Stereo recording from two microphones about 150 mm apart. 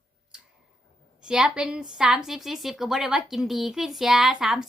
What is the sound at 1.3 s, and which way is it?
A woman's voice, 5° right (ahead or behind).